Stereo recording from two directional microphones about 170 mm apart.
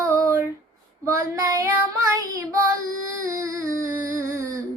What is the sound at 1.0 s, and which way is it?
Child singing, 20° right (ahead or behind).